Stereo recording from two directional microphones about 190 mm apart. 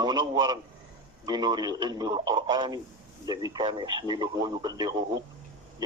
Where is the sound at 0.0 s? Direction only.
20° right (ahead or behind).